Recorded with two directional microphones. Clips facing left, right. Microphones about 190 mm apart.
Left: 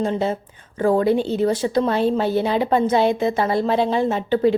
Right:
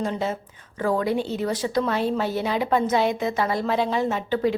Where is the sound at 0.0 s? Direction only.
30° left (ahead or behind).